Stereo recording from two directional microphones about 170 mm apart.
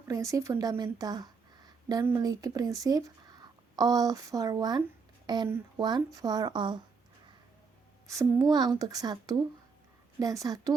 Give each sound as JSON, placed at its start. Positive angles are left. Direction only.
{"t": 0.1, "sound": "a woman's voice", "side_deg": -20}
{"t": 8.0, "sound": "a woman's voice", "side_deg": -20}